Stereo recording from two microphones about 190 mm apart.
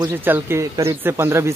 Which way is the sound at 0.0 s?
10° right (ahead or behind).